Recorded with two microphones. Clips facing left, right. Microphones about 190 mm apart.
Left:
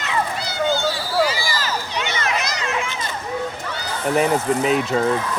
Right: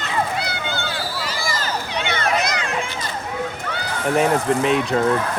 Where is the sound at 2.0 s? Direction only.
55° right (ahead or behind).